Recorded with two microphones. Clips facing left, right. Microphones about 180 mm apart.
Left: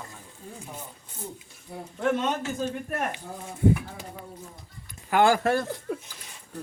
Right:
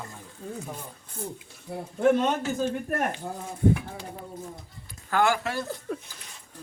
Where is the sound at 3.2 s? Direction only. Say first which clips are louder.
Right 4 dB; 55° right (ahead or behind).